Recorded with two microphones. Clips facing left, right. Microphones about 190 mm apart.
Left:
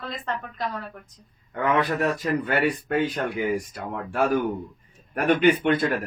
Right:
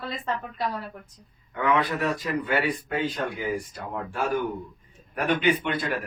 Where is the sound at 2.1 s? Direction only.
55° left (ahead or behind).